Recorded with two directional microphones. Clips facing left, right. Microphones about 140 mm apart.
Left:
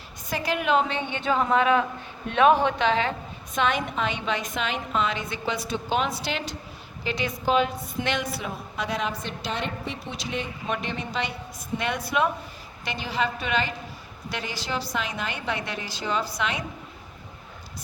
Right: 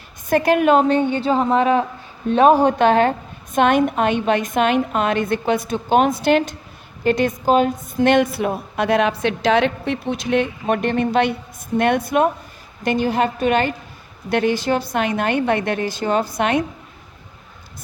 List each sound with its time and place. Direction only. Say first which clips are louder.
0.3 s a woman's voice: right 10 dB; 55° right (ahead or behind)